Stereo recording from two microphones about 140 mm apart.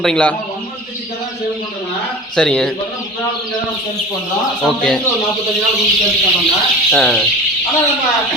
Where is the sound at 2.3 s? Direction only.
5° left (ahead or behind).